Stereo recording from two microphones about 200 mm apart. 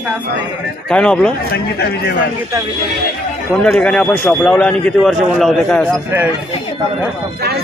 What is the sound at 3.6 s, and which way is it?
A man's voice, 5° left (ahead or behind).